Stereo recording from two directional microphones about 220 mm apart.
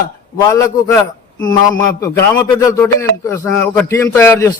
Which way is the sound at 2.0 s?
15° left (ahead or behind).